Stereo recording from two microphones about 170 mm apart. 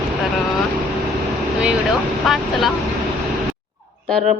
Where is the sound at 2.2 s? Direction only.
Centre (ahead or behind).